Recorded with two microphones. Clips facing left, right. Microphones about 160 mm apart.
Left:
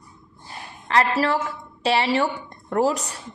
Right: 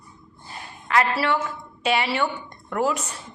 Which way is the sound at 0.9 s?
35° left (ahead or behind).